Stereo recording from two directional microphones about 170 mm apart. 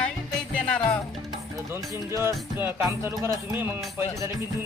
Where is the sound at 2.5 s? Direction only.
10° right (ahead or behind).